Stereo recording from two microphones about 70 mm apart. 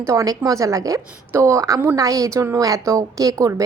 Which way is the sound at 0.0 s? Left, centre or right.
Right.